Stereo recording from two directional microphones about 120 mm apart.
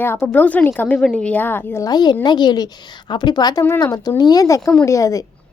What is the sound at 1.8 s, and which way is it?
A woman's voice, 35° left (ahead or behind).